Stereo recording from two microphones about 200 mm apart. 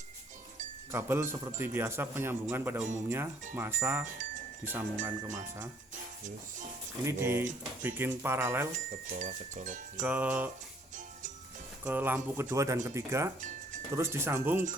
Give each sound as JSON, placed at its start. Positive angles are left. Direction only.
{"t": 0.9, "sound": "a man's voice", "side_deg": -10}
{"t": 7.0, "sound": "a man's voice", "side_deg": -15}
{"t": 8.9, "sound": "speech", "side_deg": -40}
{"t": 10.0, "sound": "a man's voice", "side_deg": -5}
{"t": 11.9, "sound": "a man's voice", "side_deg": -10}